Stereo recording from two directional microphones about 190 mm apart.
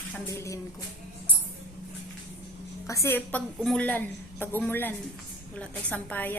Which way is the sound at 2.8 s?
15° left (ahead or behind).